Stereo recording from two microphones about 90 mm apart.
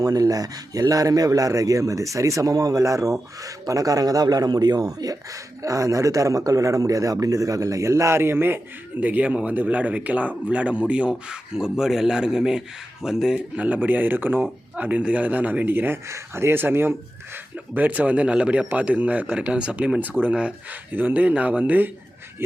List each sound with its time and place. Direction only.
0.0 s a man's voice: 40° right (ahead or behind); by 21.8 s 20° right (ahead or behind)